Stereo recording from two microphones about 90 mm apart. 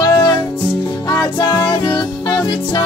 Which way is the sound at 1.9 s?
55° left (ahead or behind).